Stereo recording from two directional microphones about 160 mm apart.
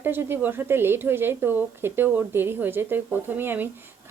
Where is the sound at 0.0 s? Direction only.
15° right (ahead or behind).